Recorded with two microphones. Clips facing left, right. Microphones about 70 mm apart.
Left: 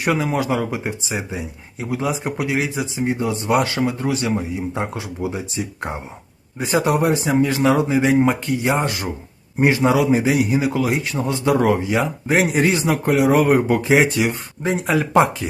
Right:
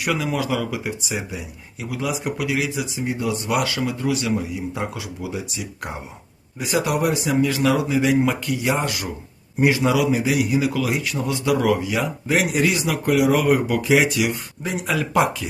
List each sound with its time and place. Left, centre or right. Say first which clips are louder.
0.0 s speech: left 3 dB; left